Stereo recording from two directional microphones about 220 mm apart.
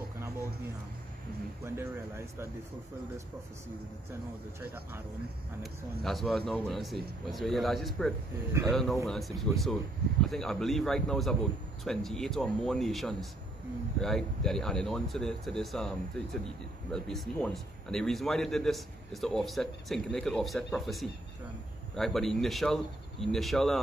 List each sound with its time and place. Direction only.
1.6 s speech: 10° right (ahead or behind)
6.0 s speech: centre (ahead or behind)
16.9 s speech: centre (ahead or behind)